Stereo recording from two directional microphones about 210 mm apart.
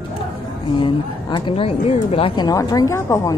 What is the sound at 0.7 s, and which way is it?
A woman's voice, 25° left (ahead or behind).